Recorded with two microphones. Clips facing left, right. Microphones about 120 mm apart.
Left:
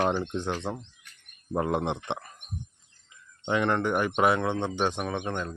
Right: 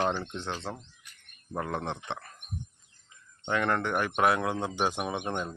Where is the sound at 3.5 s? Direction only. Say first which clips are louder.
Left 3 dB; centre (ahead or behind); by 5.5 s 15° right (ahead or behind).